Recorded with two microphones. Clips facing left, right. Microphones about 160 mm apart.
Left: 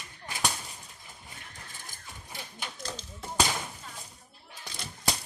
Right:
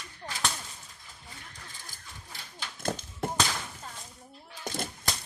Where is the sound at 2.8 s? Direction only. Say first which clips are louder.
Right 12 dB; 55° right (ahead or behind).